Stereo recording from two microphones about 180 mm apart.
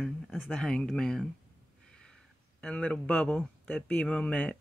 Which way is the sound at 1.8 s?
5° left (ahead or behind).